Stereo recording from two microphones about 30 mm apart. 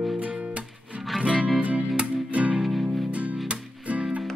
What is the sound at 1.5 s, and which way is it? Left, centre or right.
Music, right.